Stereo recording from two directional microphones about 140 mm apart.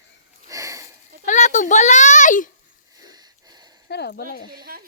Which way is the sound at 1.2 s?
60° left (ahead or behind).